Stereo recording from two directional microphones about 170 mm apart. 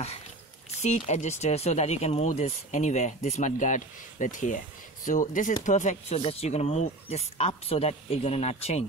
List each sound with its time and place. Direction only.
0.7 s speech: 45° left (ahead or behind)